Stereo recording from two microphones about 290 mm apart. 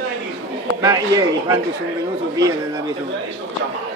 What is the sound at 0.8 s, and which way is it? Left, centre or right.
Speech, centre.